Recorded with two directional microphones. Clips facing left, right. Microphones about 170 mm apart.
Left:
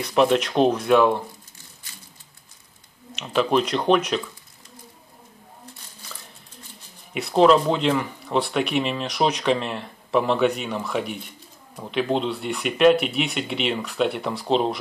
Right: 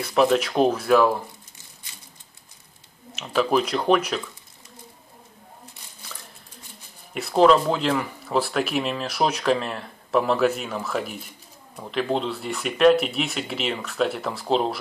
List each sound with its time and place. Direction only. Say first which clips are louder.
0.0 s speech: left 1 dB; centre (ahead or behind)
3.2 s speech: left 1 dB; centre (ahead or behind)
7.2 s speech: left 1 dB; centre (ahead or behind)